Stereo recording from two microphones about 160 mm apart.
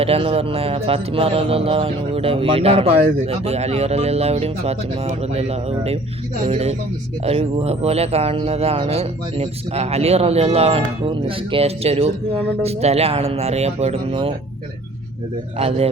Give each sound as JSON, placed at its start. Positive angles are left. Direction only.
{"t": 0.0, "sound": "speech", "side_deg": -35}
{"t": 15.5, "sound": "speech", "side_deg": -40}